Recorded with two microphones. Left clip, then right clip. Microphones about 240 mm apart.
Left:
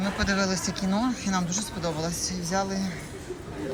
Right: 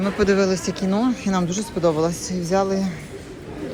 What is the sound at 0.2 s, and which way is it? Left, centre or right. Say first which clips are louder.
Speech: right 9 dB; centre.